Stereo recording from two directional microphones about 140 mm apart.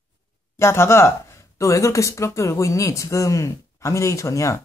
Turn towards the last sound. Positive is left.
turn(degrees=20)  # may be behind; listen again after turning